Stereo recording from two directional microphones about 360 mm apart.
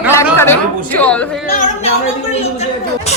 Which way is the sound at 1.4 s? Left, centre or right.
Left.